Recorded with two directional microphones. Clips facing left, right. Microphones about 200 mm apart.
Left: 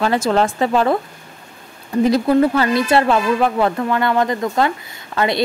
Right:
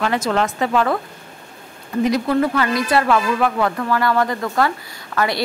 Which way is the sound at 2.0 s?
30° left (ahead or behind).